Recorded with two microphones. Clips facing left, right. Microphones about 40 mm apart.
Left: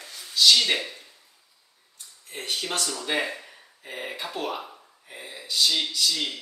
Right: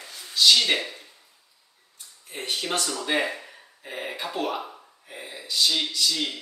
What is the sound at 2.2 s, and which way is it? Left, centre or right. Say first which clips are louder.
Speech: right 1 dB; centre.